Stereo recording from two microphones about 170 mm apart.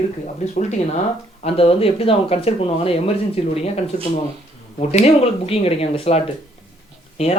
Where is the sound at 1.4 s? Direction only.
35° left (ahead or behind).